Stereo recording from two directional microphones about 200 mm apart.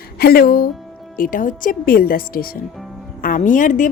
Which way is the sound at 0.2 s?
50° left (ahead or behind).